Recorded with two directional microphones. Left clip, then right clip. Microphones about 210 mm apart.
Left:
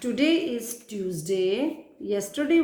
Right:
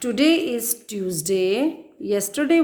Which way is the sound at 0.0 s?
55° right (ahead or behind).